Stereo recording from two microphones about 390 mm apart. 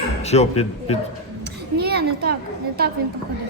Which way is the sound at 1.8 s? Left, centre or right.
Right.